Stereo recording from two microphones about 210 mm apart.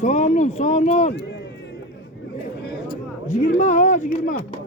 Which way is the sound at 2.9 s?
35° left (ahead or behind).